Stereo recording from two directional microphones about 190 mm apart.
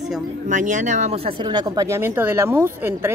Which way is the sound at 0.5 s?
40° right (ahead or behind).